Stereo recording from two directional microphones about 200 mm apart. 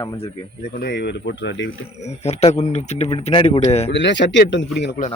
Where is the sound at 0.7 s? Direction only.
55° left (ahead or behind).